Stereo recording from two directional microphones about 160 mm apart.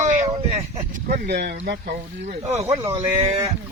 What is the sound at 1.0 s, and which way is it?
Speech, 90° right.